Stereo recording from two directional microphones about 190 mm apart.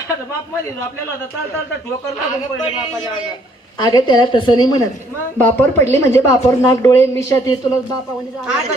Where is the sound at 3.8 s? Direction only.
25° left (ahead or behind).